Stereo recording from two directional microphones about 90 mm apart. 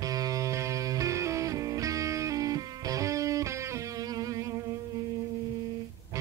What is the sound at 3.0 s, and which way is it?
Music, 35° right (ahead or behind).